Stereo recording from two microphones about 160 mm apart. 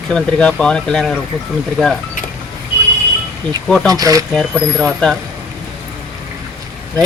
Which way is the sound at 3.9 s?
20° right (ahead or behind).